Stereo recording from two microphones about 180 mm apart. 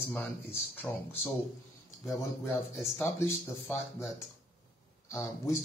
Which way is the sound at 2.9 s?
10° left (ahead or behind).